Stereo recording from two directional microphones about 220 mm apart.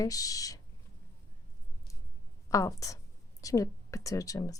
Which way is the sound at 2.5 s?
15° left (ahead or behind).